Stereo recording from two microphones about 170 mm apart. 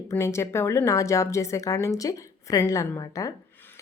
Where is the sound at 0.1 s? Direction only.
15° left (ahead or behind).